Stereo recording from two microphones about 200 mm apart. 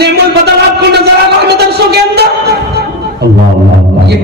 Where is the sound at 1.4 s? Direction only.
55° right (ahead or behind).